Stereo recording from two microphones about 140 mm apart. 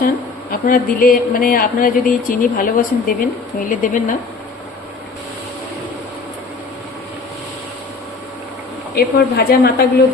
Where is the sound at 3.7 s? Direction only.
70° left (ahead or behind).